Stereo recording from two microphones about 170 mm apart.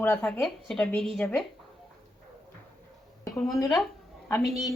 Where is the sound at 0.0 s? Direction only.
10° left (ahead or behind).